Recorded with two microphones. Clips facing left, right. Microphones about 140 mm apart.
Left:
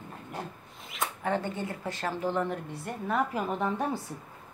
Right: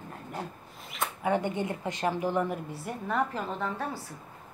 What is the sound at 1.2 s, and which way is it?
A woman's voice, 15° right (ahead or behind).